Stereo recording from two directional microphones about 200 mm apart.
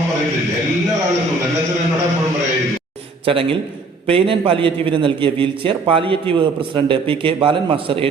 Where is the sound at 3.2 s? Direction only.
25° right (ahead or behind).